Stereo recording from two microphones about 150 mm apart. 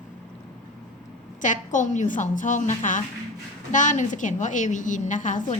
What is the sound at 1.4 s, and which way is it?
A woman's voice, 55° left (ahead or behind).